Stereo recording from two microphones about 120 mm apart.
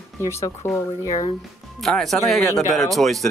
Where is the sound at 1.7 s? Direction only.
Centre (ahead or behind).